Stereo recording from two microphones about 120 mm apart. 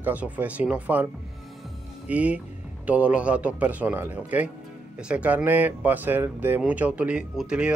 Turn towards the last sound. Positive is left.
turn(degrees=-5)  # may be behind; listen again after turning